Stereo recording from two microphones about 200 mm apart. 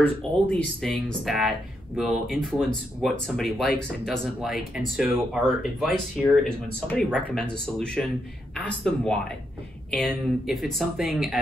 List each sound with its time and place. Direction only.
0.0 s speech: 5° left (ahead or behind)